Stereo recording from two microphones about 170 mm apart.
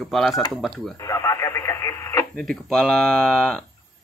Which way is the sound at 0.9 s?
20° left (ahead or behind).